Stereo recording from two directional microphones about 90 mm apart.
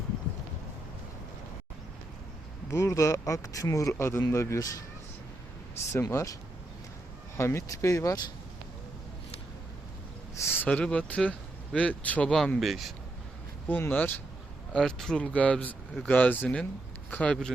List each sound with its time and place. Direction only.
2.6 s speech: 35° left (ahead or behind)
5.9 s speech: 30° left (ahead or behind)
7.3 s speech: 30° left (ahead or behind)
10.4 s a sound: 25° left (ahead or behind)
10.7 s speech: 15° left (ahead or behind)
12.5 s speech: centre (ahead or behind)
13.7 s speech: 20° left (ahead or behind)
14.7 s speech: 5° left (ahead or behind)